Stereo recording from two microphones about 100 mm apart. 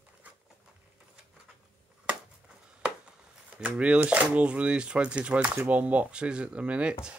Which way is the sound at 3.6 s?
10° right (ahead or behind).